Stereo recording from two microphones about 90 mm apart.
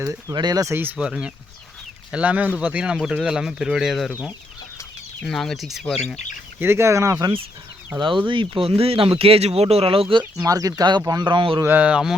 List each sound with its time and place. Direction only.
0.3 s speech: 50° right (ahead or behind)
0.6 s speech: 25° right (ahead or behind)
0.9 s speech: 10° right (ahead or behind)
5.2 s speech: 5° left (ahead or behind)
6.6 s speech: 30° right (ahead or behind)
7.9 s speech: 65° right (ahead or behind)
8.3 s speech: 75° right (ahead or behind)
10.4 s speech: 40° right (ahead or behind); by 11.6 s 65° right (ahead or behind)
11.6 s speech: 20° right (ahead or behind)